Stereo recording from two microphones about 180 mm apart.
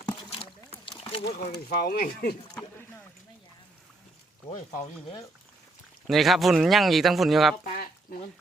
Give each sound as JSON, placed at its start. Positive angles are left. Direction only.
{"t": 0.0, "sound": "rowboat", "side_deg": 25}
{"t": 1.2, "sound": "speech", "side_deg": 60}
{"t": 6.1, "sound": "speech", "side_deg": 0}